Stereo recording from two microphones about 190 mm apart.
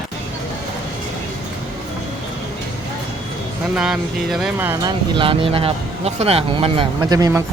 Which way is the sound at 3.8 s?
5° right (ahead or behind).